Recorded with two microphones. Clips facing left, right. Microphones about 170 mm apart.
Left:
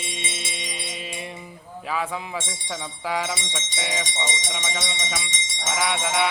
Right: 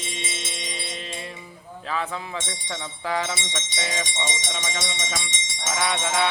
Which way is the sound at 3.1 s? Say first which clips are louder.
Even; 10° left (ahead or behind).